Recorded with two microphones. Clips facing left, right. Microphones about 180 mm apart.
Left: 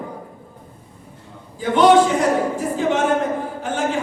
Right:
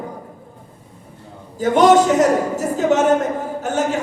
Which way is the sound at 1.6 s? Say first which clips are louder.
Right 1 dB; 45° right (ahead or behind).